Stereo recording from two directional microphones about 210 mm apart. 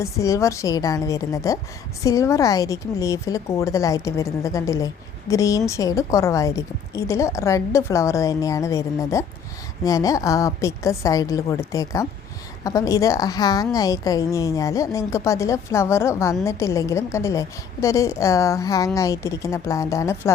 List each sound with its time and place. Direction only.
0.0 s a woman's voice: 15° left (ahead or behind)